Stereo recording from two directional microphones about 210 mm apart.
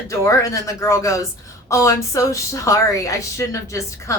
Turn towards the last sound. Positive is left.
turn(degrees=15)  # may be behind; listen again after turning